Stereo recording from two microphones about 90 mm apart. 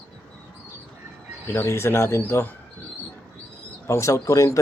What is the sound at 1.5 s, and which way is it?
Speech, 30° left (ahead or behind).